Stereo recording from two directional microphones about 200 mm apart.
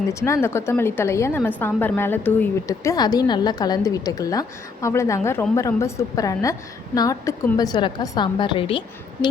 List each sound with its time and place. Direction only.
0.1 s a woman's voice: 15° left (ahead or behind)